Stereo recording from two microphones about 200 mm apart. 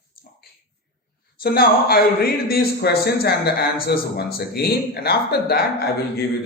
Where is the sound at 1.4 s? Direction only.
50° left (ahead or behind).